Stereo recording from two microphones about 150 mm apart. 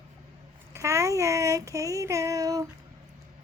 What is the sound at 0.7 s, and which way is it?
Child singing, 20° right (ahead or behind).